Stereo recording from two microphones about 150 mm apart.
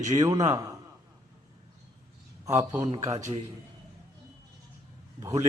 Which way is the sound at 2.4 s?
20° right (ahead or behind).